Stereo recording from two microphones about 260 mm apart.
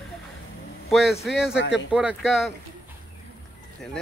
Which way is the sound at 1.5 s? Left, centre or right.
Left.